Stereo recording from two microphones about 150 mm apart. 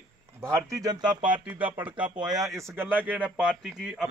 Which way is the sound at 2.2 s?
25° right (ahead or behind).